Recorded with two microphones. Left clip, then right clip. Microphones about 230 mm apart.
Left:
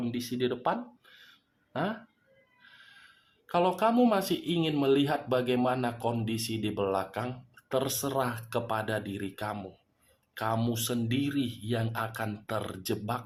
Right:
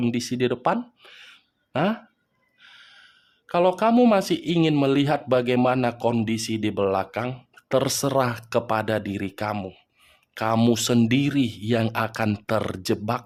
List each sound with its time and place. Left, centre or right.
0.0 s speech: right